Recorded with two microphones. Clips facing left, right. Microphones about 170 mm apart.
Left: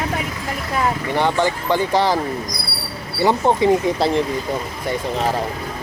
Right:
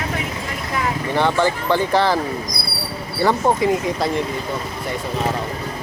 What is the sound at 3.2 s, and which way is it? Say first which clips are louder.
Speech: left 1 dB; 20° left (ahead or behind).